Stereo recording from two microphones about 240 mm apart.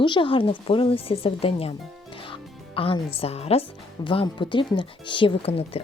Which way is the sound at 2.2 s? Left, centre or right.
Left.